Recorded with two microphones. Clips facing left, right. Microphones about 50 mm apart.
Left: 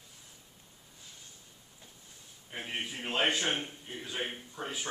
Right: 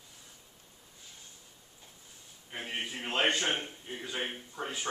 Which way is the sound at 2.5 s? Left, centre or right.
Centre.